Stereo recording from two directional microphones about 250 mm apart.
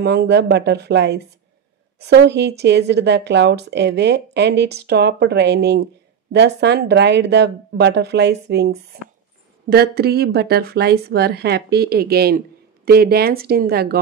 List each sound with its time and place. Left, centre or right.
0.0 s a woman's voice: right